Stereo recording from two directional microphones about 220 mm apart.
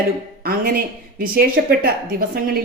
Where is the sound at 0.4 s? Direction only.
40° right (ahead or behind).